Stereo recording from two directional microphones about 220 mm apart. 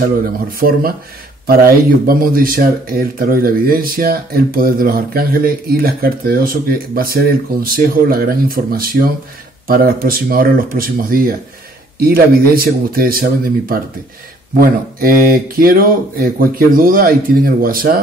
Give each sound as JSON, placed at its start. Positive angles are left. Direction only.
{"t": 0.0, "sound": "speech", "side_deg": -40}